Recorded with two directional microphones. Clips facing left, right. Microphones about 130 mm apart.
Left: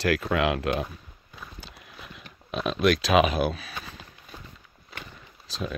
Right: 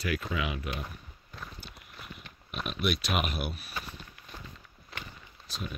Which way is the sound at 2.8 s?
90° left.